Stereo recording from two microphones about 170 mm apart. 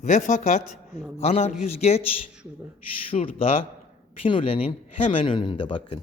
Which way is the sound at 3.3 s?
35° left (ahead or behind).